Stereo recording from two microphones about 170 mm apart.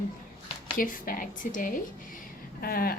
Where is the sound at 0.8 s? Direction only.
55° left (ahead or behind).